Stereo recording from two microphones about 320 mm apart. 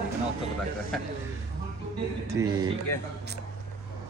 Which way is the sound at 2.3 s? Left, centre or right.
Centre.